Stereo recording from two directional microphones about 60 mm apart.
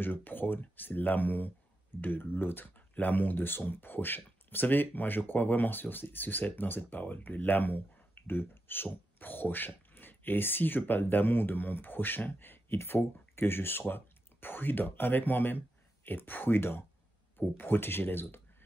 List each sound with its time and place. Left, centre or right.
0.0 s speech: left